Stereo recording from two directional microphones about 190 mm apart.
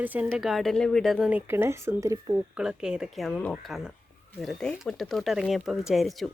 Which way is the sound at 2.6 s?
5° right (ahead or behind).